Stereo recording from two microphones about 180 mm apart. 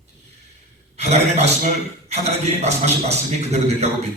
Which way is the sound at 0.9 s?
35° right (ahead or behind).